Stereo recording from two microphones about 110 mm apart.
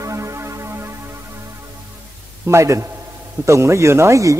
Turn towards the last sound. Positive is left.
turn(degrees=-30)  # may be behind; listen again after turning